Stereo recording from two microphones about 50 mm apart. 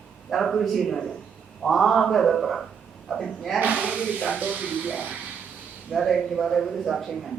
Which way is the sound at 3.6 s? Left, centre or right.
Right.